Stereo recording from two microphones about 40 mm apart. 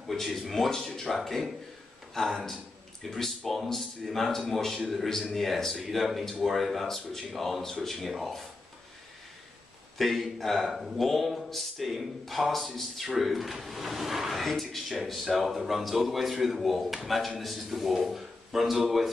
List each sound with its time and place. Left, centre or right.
0.1 s speech: centre
9.9 s speech: centre